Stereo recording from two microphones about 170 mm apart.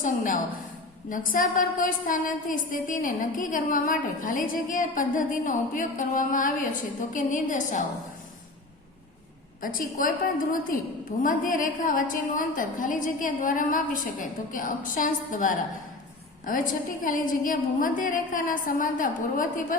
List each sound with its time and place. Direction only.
0.0 s a woman's voice: 50° left (ahead or behind)
9.6 s a woman's voice: 55° left (ahead or behind)